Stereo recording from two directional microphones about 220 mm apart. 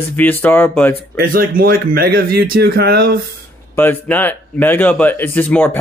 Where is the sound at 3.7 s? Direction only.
10° left (ahead or behind).